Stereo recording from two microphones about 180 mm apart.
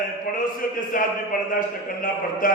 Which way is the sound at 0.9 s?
50° left (ahead or behind).